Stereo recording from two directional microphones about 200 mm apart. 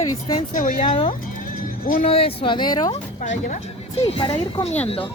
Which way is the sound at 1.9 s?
30° left (ahead or behind).